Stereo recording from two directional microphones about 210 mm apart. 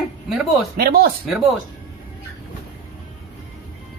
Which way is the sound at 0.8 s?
45° right (ahead or behind).